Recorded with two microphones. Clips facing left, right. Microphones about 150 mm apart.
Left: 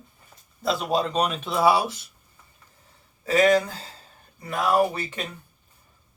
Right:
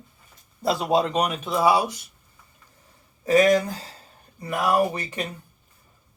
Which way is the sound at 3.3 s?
15° right (ahead or behind).